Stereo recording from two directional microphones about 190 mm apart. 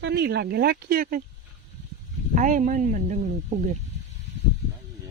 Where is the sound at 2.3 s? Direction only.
45° right (ahead or behind).